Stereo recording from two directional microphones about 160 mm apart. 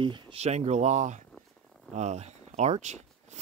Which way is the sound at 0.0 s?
35° right (ahead or behind).